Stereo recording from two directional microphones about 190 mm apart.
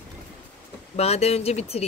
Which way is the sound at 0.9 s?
35° left (ahead or behind).